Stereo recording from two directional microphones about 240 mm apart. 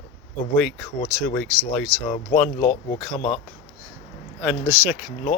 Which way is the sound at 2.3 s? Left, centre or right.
Left.